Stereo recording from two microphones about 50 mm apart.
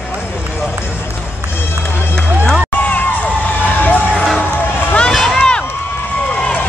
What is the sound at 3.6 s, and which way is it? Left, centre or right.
Crowd, left.